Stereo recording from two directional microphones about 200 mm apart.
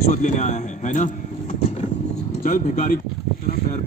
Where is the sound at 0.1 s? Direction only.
35° left (ahead or behind).